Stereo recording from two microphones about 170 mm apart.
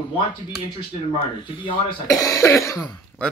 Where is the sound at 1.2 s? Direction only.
30° left (ahead or behind).